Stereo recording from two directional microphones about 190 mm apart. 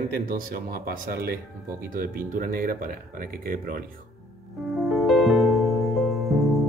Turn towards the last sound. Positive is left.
turn(degrees=0)  # may be behind; listen again after turning